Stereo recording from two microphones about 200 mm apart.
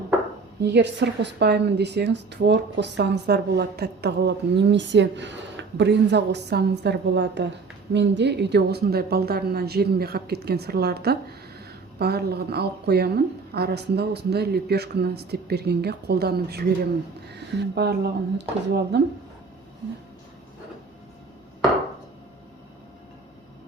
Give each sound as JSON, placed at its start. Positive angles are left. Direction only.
{"t": 0.6, "sound": "a woman's voice", "side_deg": -60}